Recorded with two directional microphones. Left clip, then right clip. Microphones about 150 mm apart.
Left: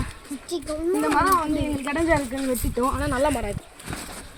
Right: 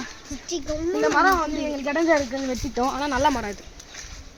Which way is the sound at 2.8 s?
60° right (ahead or behind).